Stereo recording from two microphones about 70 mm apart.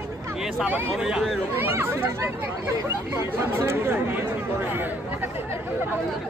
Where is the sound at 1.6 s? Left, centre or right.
Right.